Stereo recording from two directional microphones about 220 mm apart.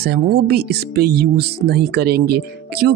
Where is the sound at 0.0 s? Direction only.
45° right (ahead or behind).